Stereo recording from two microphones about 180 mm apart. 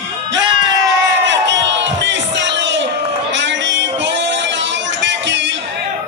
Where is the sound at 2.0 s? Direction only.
80° right.